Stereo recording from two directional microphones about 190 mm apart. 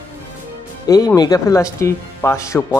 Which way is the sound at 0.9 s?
20° left (ahead or behind).